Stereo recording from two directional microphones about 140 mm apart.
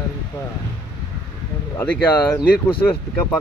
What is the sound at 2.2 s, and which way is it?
Speech, 15° left (ahead or behind).